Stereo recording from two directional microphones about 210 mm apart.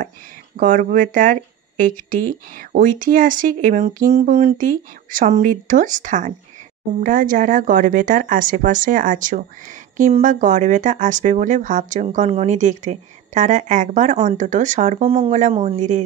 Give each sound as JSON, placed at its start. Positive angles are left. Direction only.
{"t": 0.6, "sound": "speech", "side_deg": -40}